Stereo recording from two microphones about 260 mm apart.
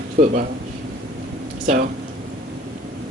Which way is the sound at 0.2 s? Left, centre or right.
Right.